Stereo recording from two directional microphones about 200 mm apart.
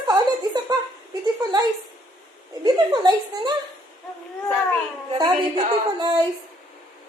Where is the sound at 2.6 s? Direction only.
20° right (ahead or behind).